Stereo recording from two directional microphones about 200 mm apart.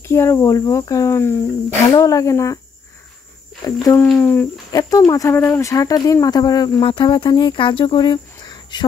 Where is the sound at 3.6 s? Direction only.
20° left (ahead or behind).